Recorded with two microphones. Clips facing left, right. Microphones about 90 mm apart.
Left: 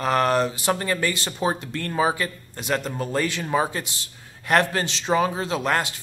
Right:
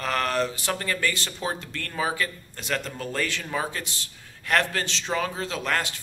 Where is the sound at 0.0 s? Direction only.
20° left (ahead or behind).